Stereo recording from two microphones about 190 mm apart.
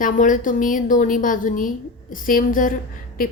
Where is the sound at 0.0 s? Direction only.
45° left (ahead or behind).